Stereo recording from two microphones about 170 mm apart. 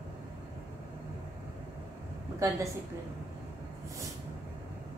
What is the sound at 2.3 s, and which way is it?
Speech, 20° right (ahead or behind).